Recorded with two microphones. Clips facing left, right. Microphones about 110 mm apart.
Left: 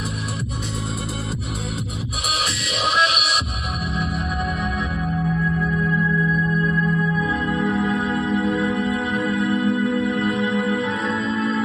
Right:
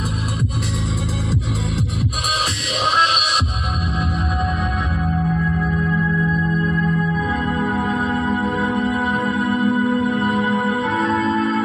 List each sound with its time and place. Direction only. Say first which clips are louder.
3.0 s music: right 3 dB; 45° right (ahead or behind)
6.3 s music: right 1 dB; 30° right (ahead or behind)
7.2 s music: right 1 dB; 45° right (ahead or behind)